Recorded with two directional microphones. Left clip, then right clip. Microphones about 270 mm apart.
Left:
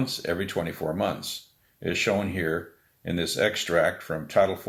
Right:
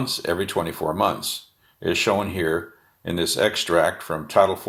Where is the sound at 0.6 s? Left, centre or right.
Right.